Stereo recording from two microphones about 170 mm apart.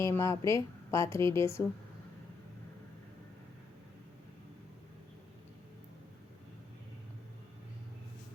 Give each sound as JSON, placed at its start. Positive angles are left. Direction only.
{"t": 0.0, "sound": "speech", "side_deg": 15}